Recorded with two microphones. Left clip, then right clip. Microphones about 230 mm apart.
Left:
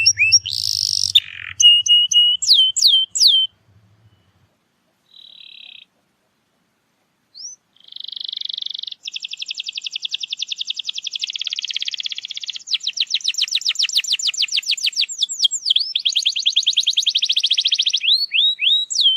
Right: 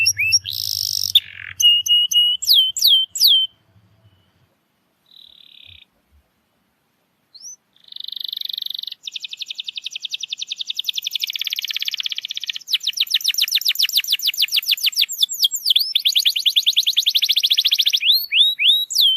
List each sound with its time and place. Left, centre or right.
0.0 s bird: centre
5.4 s frog: centre
7.4 s frog: centre
9.0 s a sound: centre
13.0 s bird: centre
15.2 s a sound: centre